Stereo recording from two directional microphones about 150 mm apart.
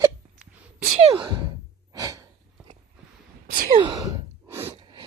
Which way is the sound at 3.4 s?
70° right (ahead or behind).